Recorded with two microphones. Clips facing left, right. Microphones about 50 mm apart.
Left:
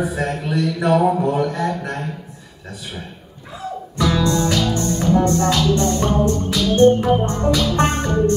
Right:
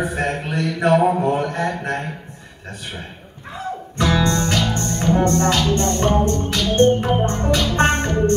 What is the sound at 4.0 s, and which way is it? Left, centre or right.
Music, right.